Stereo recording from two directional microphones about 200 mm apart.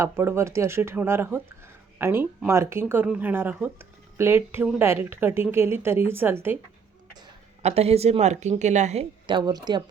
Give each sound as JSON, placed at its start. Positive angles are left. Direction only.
{"t": 0.0, "sound": "speech", "side_deg": -15}
{"t": 7.6, "sound": "a woman's voice", "side_deg": -30}